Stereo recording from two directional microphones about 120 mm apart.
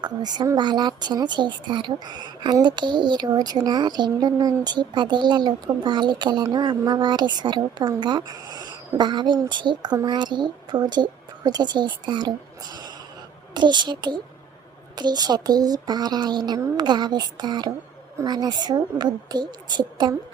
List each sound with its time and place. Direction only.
0.0 s speech: 35° right (ahead or behind)